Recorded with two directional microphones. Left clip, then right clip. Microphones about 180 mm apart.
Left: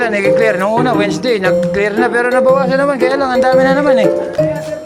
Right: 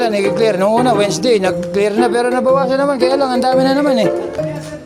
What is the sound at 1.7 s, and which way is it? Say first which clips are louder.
Music: left 1 dB; 30° right (ahead or behind).